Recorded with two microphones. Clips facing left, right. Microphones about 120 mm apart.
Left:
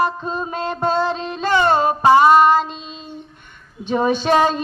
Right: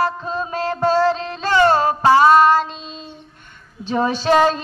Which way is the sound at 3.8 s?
15° left (ahead or behind).